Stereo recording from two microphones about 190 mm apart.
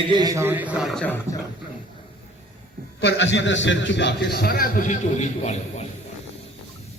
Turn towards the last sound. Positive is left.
turn(degrees=35)  # may be behind; listen again after turning